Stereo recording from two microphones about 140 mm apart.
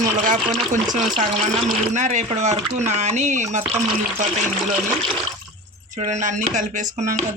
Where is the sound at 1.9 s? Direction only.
60° right (ahead or behind).